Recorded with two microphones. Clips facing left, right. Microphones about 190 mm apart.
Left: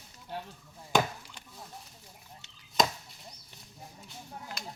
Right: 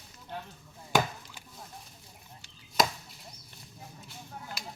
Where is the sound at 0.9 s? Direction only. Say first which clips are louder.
Even; 5° right (ahead or behind).